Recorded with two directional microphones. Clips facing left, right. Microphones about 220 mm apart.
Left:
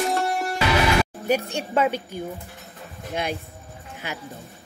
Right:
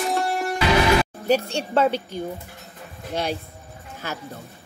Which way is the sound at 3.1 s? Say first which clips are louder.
Right 2 dB; 35° right (ahead or behind).